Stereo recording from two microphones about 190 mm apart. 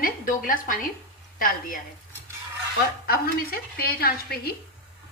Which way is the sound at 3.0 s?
55° left (ahead or behind).